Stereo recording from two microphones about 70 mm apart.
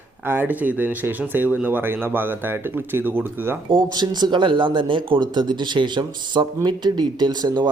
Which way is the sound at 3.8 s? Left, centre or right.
Right.